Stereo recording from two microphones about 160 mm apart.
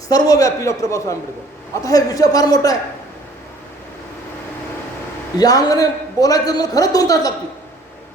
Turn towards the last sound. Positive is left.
turn(degrees=20)  # may be behind; listen again after turning